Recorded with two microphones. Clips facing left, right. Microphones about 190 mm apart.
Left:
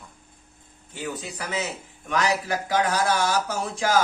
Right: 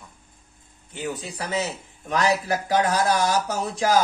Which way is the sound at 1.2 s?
30° right (ahead or behind).